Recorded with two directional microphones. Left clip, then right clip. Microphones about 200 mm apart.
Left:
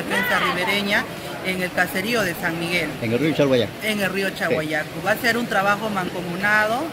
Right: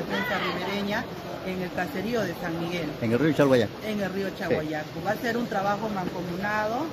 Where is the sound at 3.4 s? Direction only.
10° right (ahead or behind).